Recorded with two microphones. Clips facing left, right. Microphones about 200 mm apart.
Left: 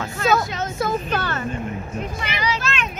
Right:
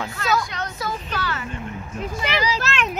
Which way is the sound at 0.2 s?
25° left (ahead or behind).